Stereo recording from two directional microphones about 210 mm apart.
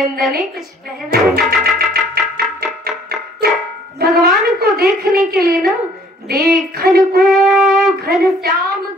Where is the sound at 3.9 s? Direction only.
50° right (ahead or behind).